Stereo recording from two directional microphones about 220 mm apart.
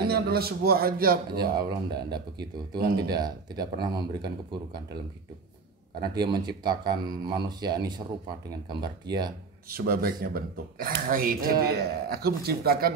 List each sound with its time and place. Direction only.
0.0 s speech: 45° right (ahead or behind)
1.7 s speech: 20° right (ahead or behind)
6.0 s speech: 20° right (ahead or behind)
9.7 s speech: 40° right (ahead or behind)